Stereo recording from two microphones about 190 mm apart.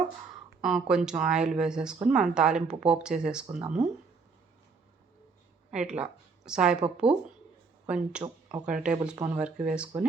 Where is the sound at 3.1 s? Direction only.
40° right (ahead or behind).